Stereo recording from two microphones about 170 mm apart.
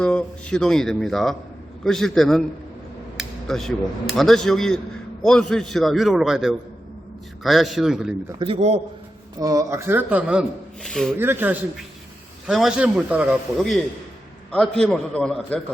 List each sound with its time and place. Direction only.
0.0 s a man's voice: 5° left (ahead or behind)
3.2 s a sound: centre (ahead or behind)
4.2 s a man's voice: centre (ahead or behind)
8.4 s a man's voice: 35° right (ahead or behind)
9.4 s a man's voice: 20° right (ahead or behind); by 11.1 s centre (ahead or behind)
11.2 s speech: 10° right (ahead or behind)
12.5 s a man's voice: centre (ahead or behind)